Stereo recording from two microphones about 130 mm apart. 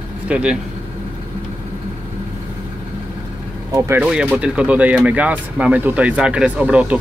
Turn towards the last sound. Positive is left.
turn(degrees=-10)  # may be behind; listen again after turning